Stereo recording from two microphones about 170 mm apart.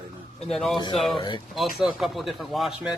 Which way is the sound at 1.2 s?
25° left (ahead or behind).